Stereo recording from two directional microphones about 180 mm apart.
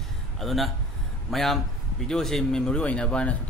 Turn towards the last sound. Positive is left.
turn(degrees=5)  # may be behind; listen again after turning